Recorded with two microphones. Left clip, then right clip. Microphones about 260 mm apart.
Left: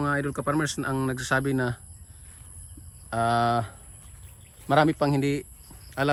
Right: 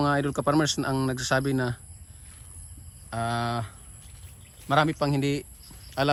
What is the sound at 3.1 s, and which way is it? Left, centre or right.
A man's voice, centre.